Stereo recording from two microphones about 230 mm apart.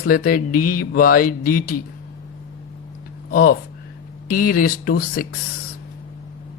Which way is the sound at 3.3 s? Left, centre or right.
Left.